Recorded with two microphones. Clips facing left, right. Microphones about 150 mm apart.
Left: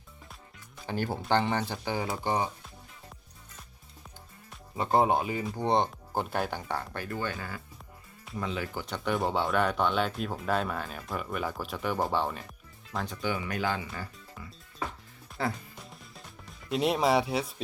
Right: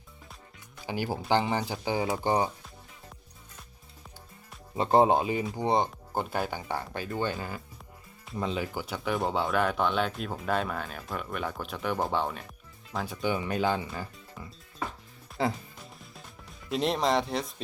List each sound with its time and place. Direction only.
0.9 s speech: 10° right (ahead or behind)
2.2 s speech: 30° right (ahead or behind)
4.8 s speech: 25° right (ahead or behind)
5.5 s speech: 5° right (ahead or behind)
13.2 s speech: 25° right (ahead or behind)
15.4 s speech: 20° right (ahead or behind)
15.8 s music: centre (ahead or behind)